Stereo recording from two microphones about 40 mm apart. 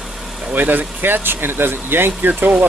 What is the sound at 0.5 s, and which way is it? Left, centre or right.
Speech, right.